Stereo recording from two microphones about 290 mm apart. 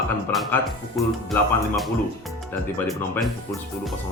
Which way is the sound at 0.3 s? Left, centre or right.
Centre.